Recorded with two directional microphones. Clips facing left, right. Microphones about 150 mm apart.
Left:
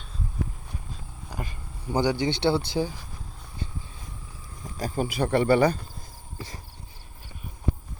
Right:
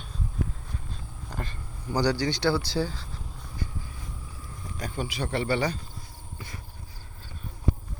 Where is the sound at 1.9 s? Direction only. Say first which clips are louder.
Left 1 dB; 20° left (ahead or behind).